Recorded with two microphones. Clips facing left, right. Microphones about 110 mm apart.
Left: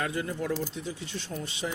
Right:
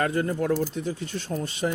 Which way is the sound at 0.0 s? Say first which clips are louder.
Right 6 dB; 50° right (ahead or behind).